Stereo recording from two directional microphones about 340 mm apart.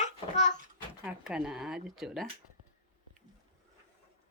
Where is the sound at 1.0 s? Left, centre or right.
Centre.